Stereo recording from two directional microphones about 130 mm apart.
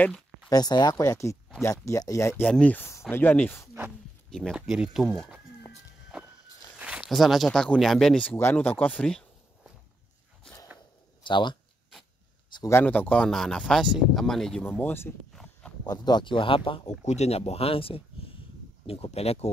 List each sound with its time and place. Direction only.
0.5 s speech: 30° left (ahead or behind)
2.4 s speech: 10° left (ahead or behind)
4.3 s speech: centre (ahead or behind)
6.1 s walk: 5° right (ahead or behind)
6.8 s speech: 10° right (ahead or behind); by 9.2 s 10° left (ahead or behind)
11.2 s speech: 35° left (ahead or behind)
12.6 s speech: 15° left (ahead or behind)
14.6 s speech: 15° left (ahead or behind)
15.8 s speech: 30° left (ahead or behind)
17.0 s speech: 60° left (ahead or behind)